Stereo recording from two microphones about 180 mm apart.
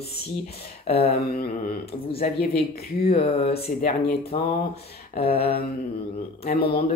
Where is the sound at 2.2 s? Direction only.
55° left (ahead or behind).